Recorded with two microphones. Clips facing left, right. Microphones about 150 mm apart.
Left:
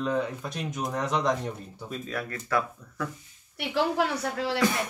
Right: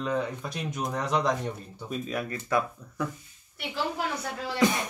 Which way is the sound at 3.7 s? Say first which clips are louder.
Left 5 dB; 75° left (ahead or behind).